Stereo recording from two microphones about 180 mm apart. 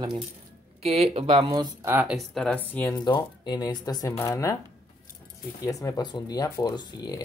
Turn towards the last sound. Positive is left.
turn(degrees=20)  # may be behind; listen again after turning